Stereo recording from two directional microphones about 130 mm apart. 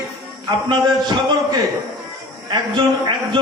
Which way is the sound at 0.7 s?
35° right (ahead or behind).